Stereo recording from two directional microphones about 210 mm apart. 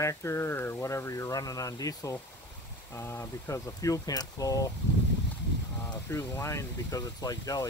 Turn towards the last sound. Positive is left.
turn(degrees=15)  # may be behind; listen again after turning